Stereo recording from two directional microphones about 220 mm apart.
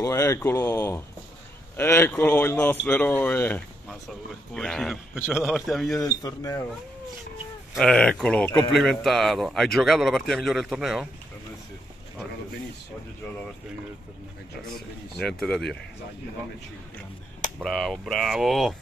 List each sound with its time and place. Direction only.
0.0 s speech: 15° left (ahead or behind)
5.9 s speech: 15° left (ahead or behind)
7.7 s speech: 5° left (ahead or behind)
14.7 s speech: centre (ahead or behind)
17.6 s speech: centre (ahead or behind)